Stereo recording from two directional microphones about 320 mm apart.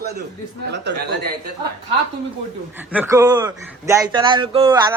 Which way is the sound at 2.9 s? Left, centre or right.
Centre.